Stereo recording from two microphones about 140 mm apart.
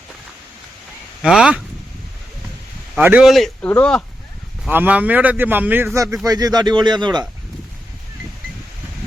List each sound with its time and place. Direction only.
1.2 s speech: 5° right (ahead or behind)
3.0 s a man's voice: 15° right (ahead or behind)
3.2 s speech: centre (ahead or behind)
4.7 s a man's voice: 10° right (ahead or behind); by 7.3 s 30° right (ahead or behind)